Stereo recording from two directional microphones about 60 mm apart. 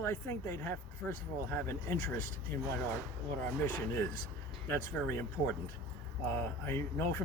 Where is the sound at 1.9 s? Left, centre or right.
Left.